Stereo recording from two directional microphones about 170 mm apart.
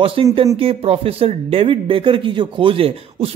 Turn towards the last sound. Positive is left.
turn(degrees=-35)  # may be behind; listen again after turning